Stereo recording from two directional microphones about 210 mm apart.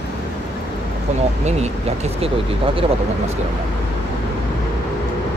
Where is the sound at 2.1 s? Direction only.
25° right (ahead or behind).